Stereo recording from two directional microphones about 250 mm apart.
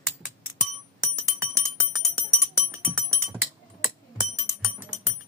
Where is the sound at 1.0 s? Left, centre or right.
Centre.